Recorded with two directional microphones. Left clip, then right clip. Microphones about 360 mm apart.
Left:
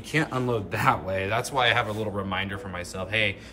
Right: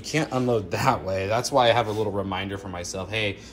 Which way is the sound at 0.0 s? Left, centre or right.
Centre.